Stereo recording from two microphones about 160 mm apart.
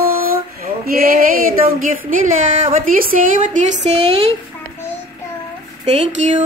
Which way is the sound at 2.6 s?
60° right (ahead or behind).